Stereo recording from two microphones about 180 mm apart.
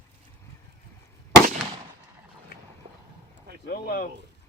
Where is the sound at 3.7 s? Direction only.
55° left (ahead or behind).